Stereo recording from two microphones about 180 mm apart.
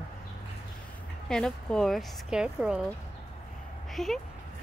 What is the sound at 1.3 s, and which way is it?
A woman's voice, 5° left (ahead or behind).